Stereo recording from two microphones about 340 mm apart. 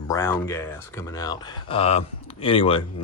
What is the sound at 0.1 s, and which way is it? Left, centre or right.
Speech, centre.